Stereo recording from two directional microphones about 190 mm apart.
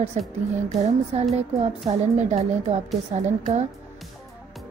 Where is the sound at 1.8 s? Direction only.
35° right (ahead or behind).